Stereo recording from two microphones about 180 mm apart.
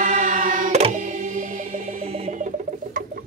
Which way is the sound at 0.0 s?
45° right (ahead or behind).